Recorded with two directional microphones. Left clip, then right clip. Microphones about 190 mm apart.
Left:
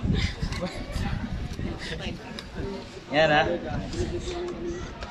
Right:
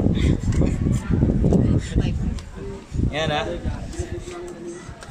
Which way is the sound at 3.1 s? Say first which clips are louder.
Left 4 dB; 55° right (ahead or behind).